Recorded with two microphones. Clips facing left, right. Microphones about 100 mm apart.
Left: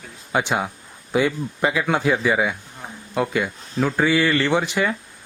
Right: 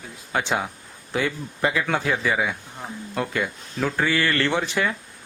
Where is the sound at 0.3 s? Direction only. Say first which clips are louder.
Left 3 dB; 15° left (ahead or behind).